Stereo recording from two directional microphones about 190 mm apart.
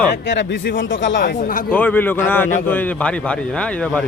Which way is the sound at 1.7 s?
10° left (ahead or behind).